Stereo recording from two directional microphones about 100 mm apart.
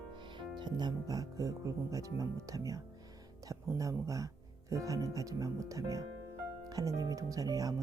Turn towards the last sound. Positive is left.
turn(degrees=-40)  # may be behind; listen again after turning